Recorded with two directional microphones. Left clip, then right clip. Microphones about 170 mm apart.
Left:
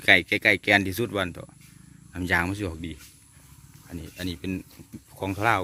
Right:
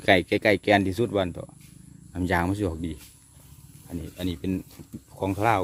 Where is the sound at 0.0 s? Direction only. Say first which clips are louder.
Left 1 dB; 20° right (ahead or behind).